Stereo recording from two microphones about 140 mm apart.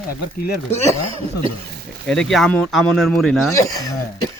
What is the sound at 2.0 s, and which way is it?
A man's voice, 5° left (ahead or behind).